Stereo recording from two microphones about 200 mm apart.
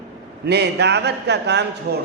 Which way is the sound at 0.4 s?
55° right (ahead or behind).